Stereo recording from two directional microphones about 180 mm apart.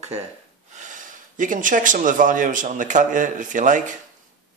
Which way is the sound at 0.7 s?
45° right (ahead or behind).